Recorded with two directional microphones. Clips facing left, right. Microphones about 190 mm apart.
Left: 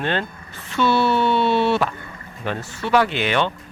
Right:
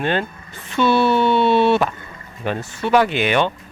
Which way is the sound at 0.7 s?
20° right (ahead or behind).